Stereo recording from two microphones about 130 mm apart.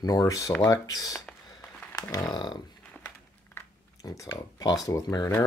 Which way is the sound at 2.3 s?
35° left (ahead or behind).